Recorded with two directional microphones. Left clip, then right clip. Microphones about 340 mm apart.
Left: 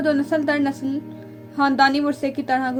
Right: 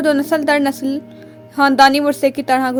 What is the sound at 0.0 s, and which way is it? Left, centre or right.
A woman's voice, right.